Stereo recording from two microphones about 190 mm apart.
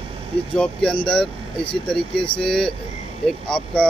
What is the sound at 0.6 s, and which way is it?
Speech, 5° left (ahead or behind).